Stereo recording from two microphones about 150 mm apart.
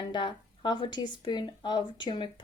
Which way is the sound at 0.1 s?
30° left (ahead or behind).